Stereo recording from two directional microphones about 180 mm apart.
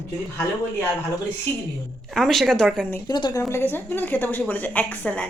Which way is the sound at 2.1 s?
Centre (ahead or behind).